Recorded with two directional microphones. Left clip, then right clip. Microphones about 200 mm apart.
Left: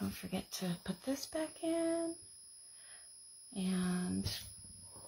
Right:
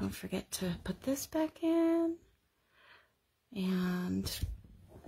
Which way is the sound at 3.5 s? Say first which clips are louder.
Right 3 dB; 50° right (ahead or behind).